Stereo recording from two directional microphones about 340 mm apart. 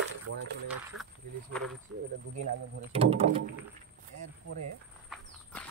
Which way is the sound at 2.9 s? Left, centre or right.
Centre.